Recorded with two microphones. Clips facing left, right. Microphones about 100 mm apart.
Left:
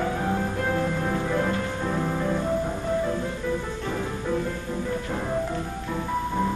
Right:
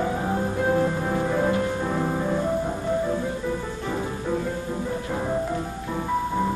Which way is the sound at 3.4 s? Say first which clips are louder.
Even; 15° right (ahead or behind).